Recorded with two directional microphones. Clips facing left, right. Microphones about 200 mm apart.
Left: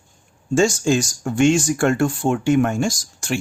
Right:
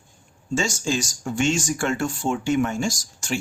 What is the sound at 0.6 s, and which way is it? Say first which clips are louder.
Speech: left 8 dB; 55° left (ahead or behind).